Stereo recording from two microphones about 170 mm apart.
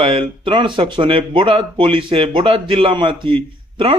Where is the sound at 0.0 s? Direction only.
30° right (ahead or behind).